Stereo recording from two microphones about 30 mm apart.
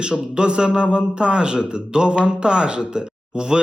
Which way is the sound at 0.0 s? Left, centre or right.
Right.